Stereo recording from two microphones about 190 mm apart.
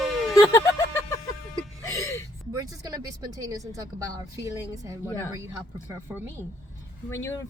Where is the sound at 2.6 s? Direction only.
20° right (ahead or behind).